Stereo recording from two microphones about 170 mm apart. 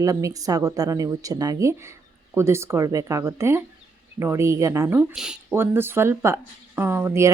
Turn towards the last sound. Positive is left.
turn(degrees=-15)  # may be behind; listen again after turning